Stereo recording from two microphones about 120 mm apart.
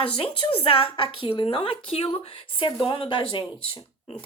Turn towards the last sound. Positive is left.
turn(degrees=45)  # may be behind; listen again after turning